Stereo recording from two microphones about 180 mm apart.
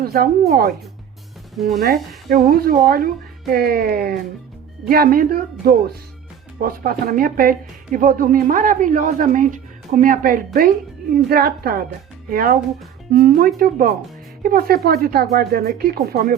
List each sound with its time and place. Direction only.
0.0 s speech: 55° right (ahead or behind)
1.8 s a woman's voice: 55° right (ahead or behind)